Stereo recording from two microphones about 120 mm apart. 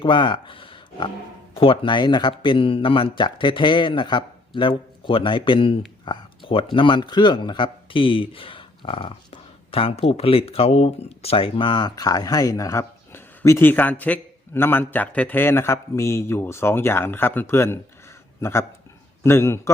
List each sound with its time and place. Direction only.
0.0 s a man's voice: 45° left (ahead or behind); by 19.7 s 20° left (ahead or behind)